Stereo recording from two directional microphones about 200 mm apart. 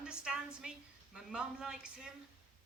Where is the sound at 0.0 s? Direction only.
5° right (ahead or behind).